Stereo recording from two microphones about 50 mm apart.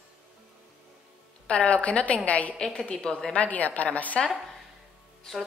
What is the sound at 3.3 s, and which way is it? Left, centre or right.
Speech, left.